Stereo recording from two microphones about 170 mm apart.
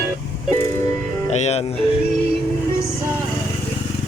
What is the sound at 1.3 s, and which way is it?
Speech, 40° left (ahead or behind).